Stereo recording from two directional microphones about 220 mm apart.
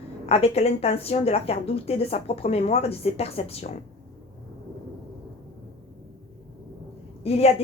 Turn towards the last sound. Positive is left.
turn(degrees=30)  # may be behind; listen again after turning